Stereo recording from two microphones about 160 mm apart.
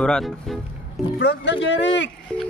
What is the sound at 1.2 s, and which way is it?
Speech, 90° left.